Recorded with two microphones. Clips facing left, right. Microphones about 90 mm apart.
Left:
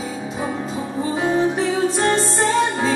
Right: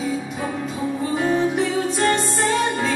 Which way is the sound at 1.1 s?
30° left (ahead or behind).